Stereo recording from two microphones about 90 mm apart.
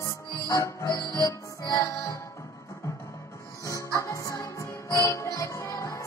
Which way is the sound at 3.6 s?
35° left (ahead or behind).